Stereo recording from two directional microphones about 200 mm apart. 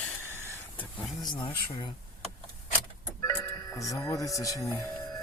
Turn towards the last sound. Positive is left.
turn(degrees=15)  # may be behind; listen again after turning